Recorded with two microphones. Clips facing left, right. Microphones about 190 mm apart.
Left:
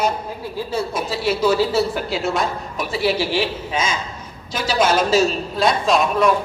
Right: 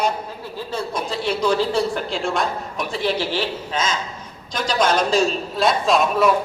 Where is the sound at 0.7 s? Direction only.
5° left (ahead or behind).